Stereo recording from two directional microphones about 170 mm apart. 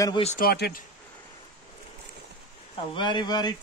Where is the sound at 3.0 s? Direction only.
25° left (ahead or behind).